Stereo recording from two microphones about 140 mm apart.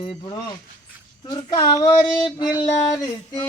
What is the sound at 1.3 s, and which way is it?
Speech, 35° left (ahead or behind).